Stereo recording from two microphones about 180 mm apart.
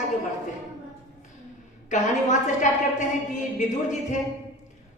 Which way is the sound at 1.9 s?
45° left (ahead or behind).